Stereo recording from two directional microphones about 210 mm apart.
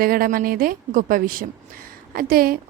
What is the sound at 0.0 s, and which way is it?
A woman's voice, 45° right (ahead or behind).